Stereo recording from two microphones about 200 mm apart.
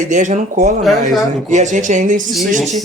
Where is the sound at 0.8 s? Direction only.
Centre (ahead or behind).